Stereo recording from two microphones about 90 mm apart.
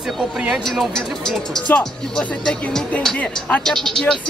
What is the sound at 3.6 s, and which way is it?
Speech, 5° left (ahead or behind).